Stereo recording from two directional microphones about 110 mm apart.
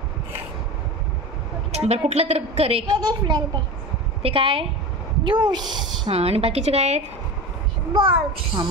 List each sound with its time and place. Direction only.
1.7 s a woman's voice: 70° right (ahead or behind)
2.9 s speech: 40° right (ahead or behind)
4.2 s a woman's voice: 55° right (ahead or behind)
5.2 s speech: 45° right (ahead or behind)
6.0 s a woman's voice: 65° right (ahead or behind); by 7.0 s 85° right
7.9 s a child's voice: 50° right (ahead or behind)